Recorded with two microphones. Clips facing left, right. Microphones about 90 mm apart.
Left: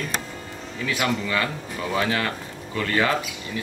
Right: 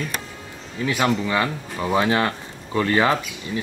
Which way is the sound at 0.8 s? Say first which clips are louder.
Right 4 dB; 25° right (ahead or behind).